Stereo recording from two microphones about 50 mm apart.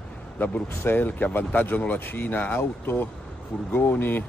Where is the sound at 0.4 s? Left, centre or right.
Left.